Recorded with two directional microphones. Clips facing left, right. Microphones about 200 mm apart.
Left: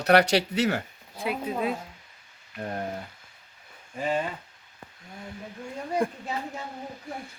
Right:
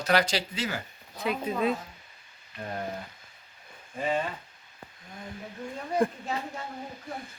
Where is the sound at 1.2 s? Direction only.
10° left (ahead or behind).